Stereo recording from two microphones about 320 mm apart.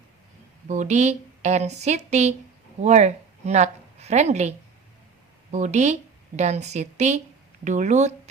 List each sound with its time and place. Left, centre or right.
0.7 s a woman's voice: right